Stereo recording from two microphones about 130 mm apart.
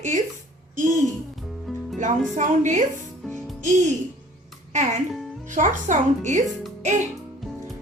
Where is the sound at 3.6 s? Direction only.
70° right (ahead or behind).